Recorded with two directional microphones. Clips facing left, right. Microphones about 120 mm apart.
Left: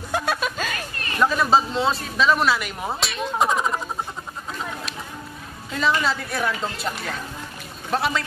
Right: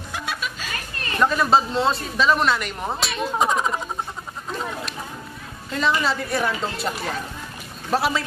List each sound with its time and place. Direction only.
0.1 s music: 45° left (ahead or behind)
1.2 s speech: centre (ahead or behind)
4.5 s a sound: centre (ahead or behind)
5.7 s speech: centre (ahead or behind)